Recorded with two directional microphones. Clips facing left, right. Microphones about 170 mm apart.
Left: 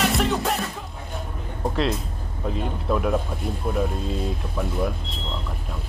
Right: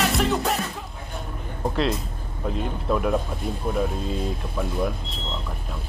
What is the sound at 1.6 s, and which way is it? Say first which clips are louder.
Music: even; centre (ahead or behind).